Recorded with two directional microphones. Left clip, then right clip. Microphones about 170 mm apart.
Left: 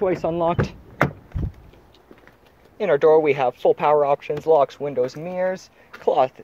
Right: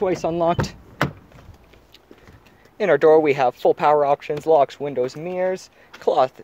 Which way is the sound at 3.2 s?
25° right (ahead or behind).